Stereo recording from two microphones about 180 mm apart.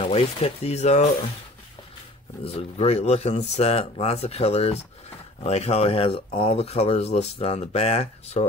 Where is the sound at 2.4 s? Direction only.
35° left (ahead or behind).